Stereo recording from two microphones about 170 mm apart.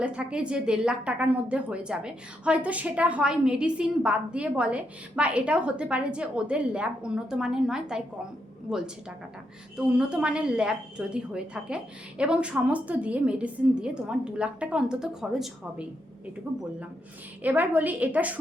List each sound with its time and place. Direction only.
0.0 s a woman's voice: 5° right (ahead or behind)
9.7 s a woman's voice: 5° right (ahead or behind)